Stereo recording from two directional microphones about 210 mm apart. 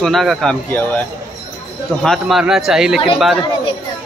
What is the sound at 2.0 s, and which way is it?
Speech, centre (ahead or behind).